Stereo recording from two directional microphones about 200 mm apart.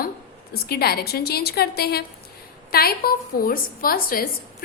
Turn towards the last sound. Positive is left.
turn(degrees=45)  # may be behind; listen again after turning